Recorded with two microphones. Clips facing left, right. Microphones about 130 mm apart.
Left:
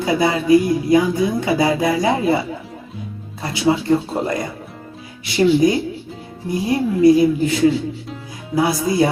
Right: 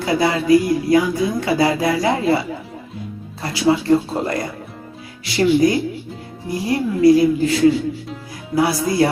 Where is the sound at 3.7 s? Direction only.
25° left (ahead or behind).